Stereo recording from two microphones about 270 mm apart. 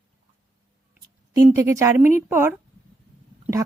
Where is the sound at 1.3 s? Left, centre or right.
Centre.